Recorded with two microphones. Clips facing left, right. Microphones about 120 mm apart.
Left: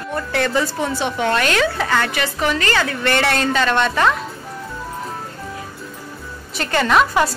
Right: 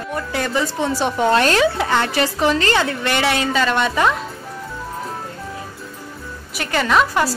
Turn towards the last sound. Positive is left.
turn(degrees=5)  # may be behind; listen again after turning